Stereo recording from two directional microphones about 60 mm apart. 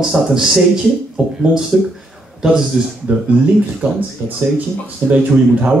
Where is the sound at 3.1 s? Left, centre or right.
Right.